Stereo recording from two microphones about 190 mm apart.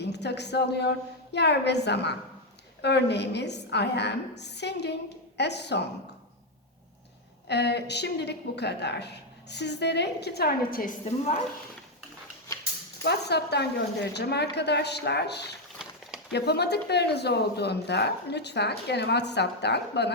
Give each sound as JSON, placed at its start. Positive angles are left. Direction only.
{"t": 0.0, "sound": "a woman's voice", "side_deg": 60}
{"t": 7.4, "sound": "a woman's voice", "side_deg": 60}
{"t": 12.5, "sound": "a sound", "side_deg": 20}
{"t": 13.0, "sound": "a woman's voice", "side_deg": 60}